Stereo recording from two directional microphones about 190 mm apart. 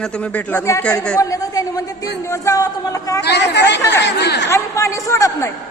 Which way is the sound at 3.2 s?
60° left (ahead or behind).